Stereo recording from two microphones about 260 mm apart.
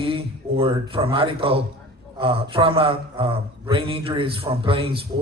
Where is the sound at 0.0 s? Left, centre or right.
Right.